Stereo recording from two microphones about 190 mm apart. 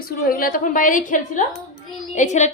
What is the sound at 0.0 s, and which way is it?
A woman's voice, 50° left (ahead or behind).